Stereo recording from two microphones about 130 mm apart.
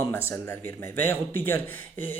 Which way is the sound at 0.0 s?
20° left (ahead or behind).